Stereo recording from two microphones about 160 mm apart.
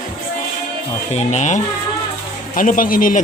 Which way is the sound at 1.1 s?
45° left (ahead or behind).